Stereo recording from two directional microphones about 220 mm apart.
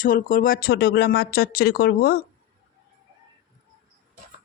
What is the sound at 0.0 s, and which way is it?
Speech, 40° left (ahead or behind).